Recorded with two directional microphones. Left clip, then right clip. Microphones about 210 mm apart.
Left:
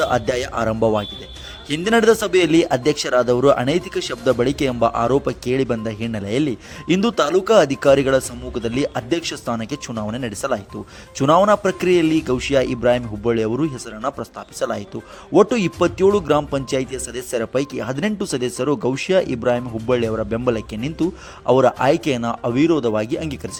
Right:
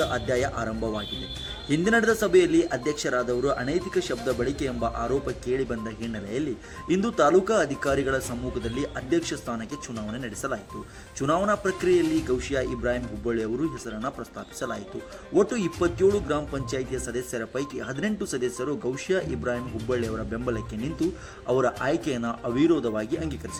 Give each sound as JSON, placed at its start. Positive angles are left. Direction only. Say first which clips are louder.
{"t": 0.0, "sound": "speech", "louder": "left 6 dB", "side_deg": 40}
{"t": 6.9, "sound": "speech", "louder": "left 3 dB", "side_deg": 40}